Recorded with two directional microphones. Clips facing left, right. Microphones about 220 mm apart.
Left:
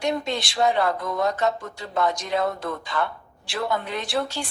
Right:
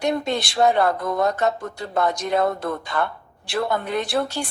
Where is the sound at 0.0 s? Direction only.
50° right (ahead or behind).